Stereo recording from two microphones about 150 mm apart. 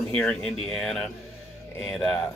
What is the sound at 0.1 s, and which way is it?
Speech, 5° left (ahead or behind).